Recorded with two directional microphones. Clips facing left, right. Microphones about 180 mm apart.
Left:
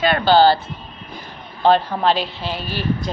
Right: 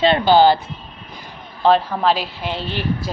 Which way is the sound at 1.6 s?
Centre (ahead or behind).